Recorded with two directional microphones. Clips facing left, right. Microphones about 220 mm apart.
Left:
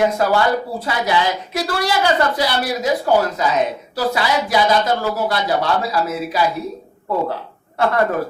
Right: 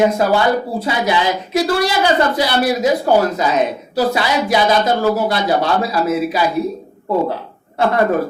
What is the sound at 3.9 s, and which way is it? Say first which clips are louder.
A woman's voice: right 3 dB; 20° right (ahead or behind).